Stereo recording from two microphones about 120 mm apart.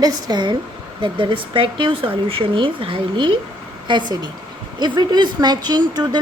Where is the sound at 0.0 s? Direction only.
35° right (ahead or behind).